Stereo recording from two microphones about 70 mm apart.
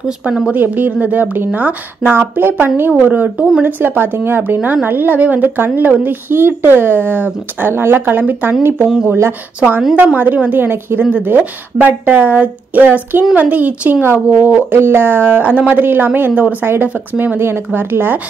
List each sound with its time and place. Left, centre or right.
0.0 s speech: centre
0.5 s a woman's voice: right
9.0 s speech: right
9.6 s a woman's voice: right